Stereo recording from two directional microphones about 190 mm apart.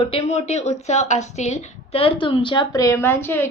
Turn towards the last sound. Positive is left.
turn(degrees=10)  # may be behind; listen again after turning